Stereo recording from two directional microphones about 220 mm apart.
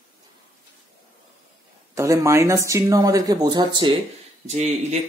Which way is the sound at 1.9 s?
15° right (ahead or behind).